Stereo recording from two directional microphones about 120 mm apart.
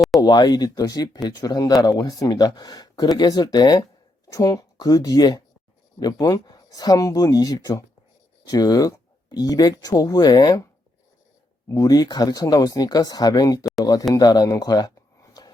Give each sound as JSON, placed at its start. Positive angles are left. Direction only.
{"t": 0.2, "sound": "speech", "side_deg": 35}
{"t": 11.7, "sound": "speech", "side_deg": 30}
{"t": 14.1, "sound": "a sound", "side_deg": 35}